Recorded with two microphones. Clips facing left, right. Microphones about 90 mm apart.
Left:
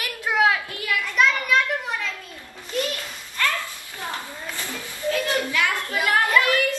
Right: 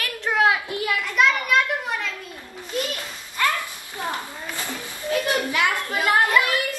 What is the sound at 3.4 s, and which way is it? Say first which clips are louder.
Children playing: right 2 dB; 15° right (ahead or behind).